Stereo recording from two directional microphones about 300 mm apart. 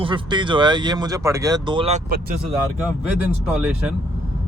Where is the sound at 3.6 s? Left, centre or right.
Centre.